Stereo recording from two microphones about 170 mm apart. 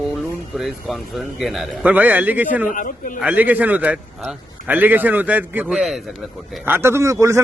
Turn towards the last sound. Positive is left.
turn(degrees=-20)  # may be behind; listen again after turning